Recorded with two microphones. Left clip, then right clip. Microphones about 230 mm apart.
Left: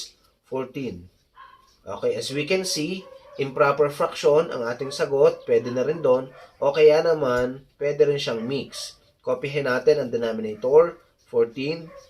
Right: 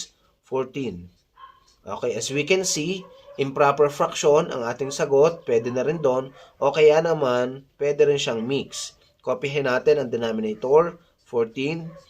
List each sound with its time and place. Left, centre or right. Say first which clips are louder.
1.8 s speech: left 1 dB; right